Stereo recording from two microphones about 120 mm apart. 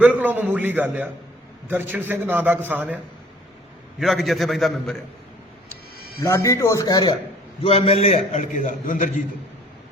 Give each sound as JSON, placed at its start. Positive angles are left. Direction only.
{"t": 0.0, "sound": "a man's voice", "side_deg": -15}
{"t": 4.0, "sound": "a man's voice", "side_deg": 0}
{"t": 6.2, "sound": "speech", "side_deg": 25}
{"t": 7.6, "sound": "a man's voice", "side_deg": 55}